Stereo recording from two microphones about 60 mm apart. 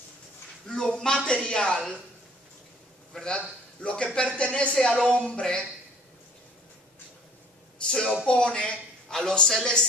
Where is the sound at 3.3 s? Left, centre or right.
Centre.